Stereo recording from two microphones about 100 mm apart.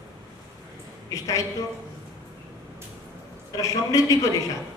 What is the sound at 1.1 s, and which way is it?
Speech, 35° left (ahead or behind).